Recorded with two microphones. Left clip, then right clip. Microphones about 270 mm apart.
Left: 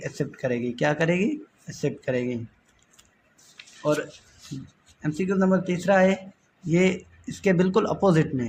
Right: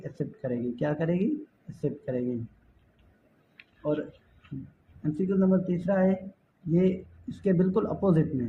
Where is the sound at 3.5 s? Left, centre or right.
Left.